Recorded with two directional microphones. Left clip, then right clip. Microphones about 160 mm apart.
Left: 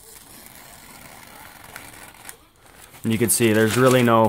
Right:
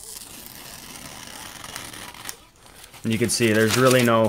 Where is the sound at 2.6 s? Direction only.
20° left (ahead or behind).